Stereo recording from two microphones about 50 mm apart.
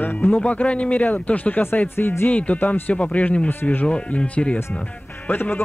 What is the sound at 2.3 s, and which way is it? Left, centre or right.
Speech, left.